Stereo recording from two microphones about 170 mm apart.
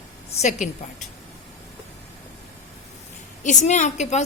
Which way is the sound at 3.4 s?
45° left (ahead or behind).